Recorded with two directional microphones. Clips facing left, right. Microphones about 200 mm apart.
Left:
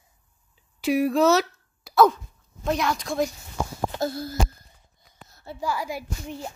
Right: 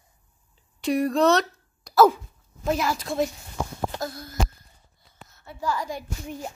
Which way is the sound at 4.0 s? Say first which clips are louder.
Left 6 dB; 30° left (ahead or behind).